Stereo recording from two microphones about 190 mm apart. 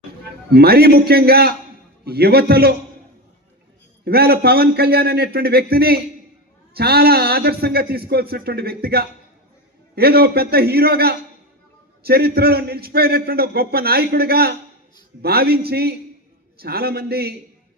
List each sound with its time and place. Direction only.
0.5 s a man's voice: 55° right (ahead or behind)
4.0 s a man's voice: 55° right (ahead or behind)